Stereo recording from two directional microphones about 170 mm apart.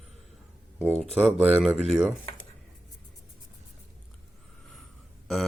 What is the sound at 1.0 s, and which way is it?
Speech, centre (ahead or behind).